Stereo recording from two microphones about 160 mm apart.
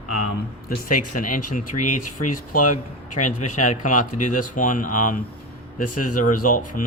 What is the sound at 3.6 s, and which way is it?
Speech, 50° left (ahead or behind).